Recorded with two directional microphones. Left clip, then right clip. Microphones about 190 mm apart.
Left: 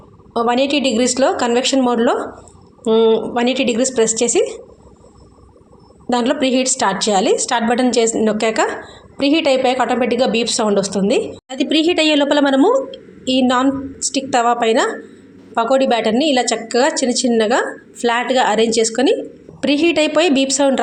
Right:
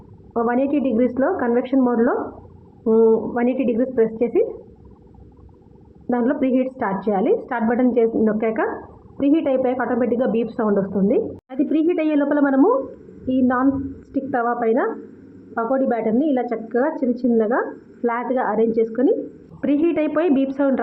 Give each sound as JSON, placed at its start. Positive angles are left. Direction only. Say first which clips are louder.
{"t": 0.3, "sound": "a woman's voice", "louder": "left 4 dB", "side_deg": 35}
{"t": 6.1, "sound": "a woman's voice", "louder": "left 4 dB", "side_deg": 35}